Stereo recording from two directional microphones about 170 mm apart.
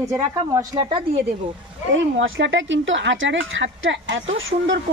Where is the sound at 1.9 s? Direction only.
90° right.